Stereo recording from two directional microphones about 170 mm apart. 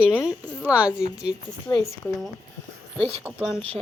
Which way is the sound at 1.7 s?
20° left (ahead or behind).